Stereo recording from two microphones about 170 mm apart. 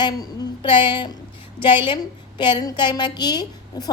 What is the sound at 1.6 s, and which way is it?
Speech, 30° left (ahead or behind).